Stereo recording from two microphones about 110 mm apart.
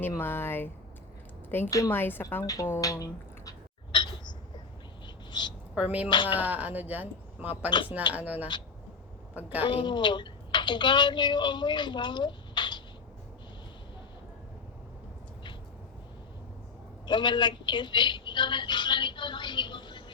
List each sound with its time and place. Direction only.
0.2 s a woman's voice: 20° left (ahead or behind)
1.7 s speech: 30° left (ahead or behind)
2.0 s speech: 20° left (ahead or behind)
2.4 s speech: 30° left (ahead or behind)
3.9 s a sound: 45° left (ahead or behind)
5.0 s bird: 45° left (ahead or behind)
5.7 s speech: 10° right (ahead or behind)
9.6 s speech: 45° left (ahead or behind)
17.1 s a sound: 45° left (ahead or behind)